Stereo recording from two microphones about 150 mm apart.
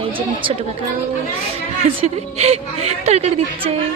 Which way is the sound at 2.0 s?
45° right (ahead or behind).